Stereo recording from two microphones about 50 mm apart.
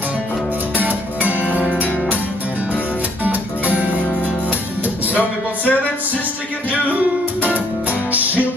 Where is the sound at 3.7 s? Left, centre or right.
Right.